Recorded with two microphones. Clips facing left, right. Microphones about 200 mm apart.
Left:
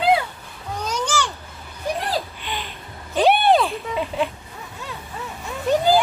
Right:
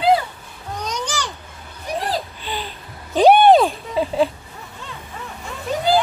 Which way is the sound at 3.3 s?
40° right (ahead or behind).